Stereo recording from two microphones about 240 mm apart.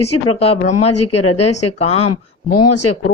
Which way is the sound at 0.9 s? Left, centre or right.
Left.